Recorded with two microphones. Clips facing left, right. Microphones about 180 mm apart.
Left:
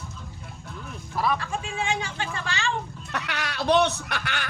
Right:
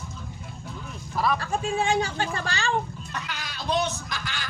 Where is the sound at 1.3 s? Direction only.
40° right (ahead or behind).